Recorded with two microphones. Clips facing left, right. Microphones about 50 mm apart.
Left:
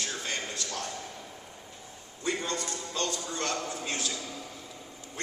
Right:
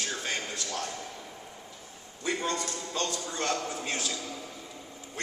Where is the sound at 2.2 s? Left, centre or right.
Right.